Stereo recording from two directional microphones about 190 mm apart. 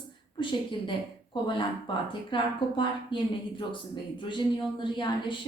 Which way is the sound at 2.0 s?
25° left (ahead or behind).